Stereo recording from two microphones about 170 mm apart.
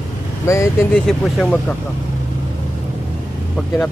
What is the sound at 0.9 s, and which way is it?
Speech, 5° left (ahead or behind).